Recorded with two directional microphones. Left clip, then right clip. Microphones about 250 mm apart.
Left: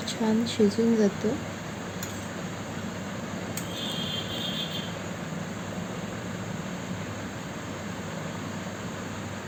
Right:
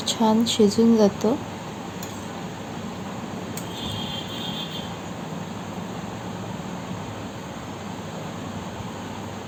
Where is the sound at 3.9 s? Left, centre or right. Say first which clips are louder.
Right 1 dB; centre.